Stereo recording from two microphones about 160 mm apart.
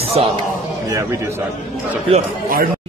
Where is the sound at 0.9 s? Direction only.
15° right (ahead or behind).